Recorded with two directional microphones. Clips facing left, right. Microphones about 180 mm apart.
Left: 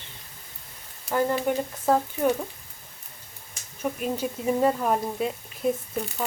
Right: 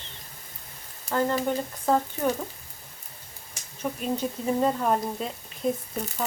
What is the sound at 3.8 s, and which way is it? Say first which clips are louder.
Speech: left 1 dB; 5° left (ahead or behind).